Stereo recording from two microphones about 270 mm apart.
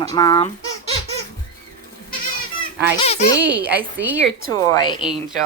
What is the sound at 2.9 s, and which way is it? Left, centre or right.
Speech, left.